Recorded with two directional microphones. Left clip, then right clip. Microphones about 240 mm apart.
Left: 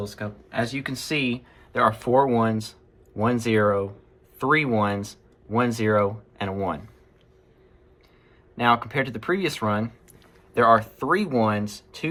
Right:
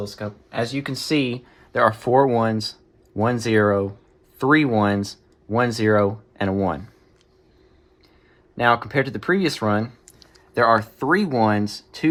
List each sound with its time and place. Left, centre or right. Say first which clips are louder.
0.1 s speech: right 3 dB; right
8.5 s speech: right 3 dB; right